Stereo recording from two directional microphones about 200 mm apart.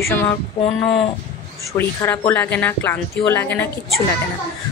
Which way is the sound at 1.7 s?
10° left (ahead or behind).